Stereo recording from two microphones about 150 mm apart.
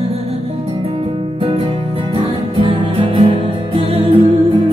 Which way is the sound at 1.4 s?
40° right (ahead or behind).